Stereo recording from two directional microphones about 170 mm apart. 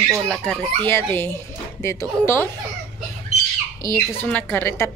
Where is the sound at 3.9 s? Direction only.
10° left (ahead or behind).